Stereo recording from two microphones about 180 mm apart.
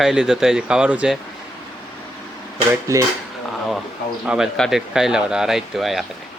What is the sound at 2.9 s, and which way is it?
Dishes, 15° right (ahead or behind).